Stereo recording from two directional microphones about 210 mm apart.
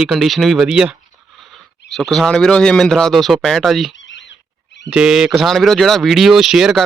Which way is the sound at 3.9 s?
60° left (ahead or behind).